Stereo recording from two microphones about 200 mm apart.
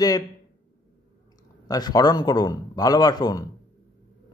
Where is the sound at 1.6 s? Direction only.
20° left (ahead or behind).